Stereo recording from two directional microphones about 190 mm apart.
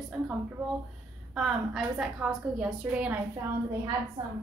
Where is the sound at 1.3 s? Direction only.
5° right (ahead or behind).